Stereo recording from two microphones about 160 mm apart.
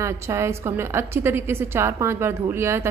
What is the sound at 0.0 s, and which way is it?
A woman's voice, 15° right (ahead or behind).